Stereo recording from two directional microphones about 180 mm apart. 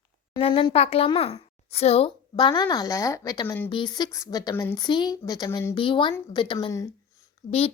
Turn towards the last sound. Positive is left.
turn(degrees=50)  # may be behind; listen again after turning